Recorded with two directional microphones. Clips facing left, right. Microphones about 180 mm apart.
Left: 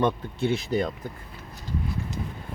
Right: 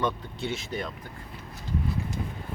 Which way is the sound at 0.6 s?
40° left (ahead or behind).